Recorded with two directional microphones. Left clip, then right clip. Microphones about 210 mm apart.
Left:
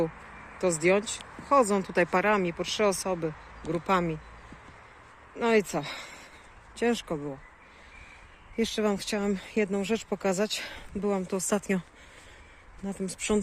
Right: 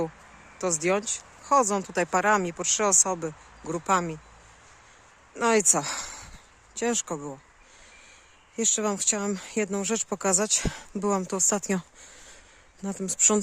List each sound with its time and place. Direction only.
0.6 s speech: 20° right (ahead or behind)
5.4 s speech: 30° right (ahead or behind)
6.7 s speech: 20° right (ahead or behind)
8.5 s speech: 15° right (ahead or behind)
12.8 s speech: 35° right (ahead or behind)